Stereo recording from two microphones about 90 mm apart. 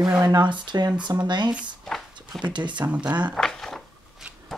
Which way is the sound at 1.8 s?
Centre (ahead or behind).